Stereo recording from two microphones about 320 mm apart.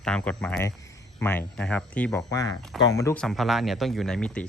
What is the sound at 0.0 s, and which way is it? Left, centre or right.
Speech, centre.